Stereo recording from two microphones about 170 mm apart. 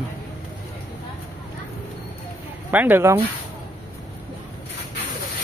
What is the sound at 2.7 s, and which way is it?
Speech, 10° right (ahead or behind).